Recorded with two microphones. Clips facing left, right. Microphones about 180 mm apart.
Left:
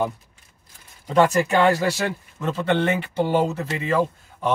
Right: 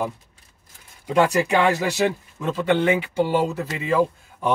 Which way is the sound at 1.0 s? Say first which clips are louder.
Left 1 dB; 15° right (ahead or behind).